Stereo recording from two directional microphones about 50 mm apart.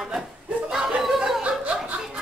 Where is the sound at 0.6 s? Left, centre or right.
Centre.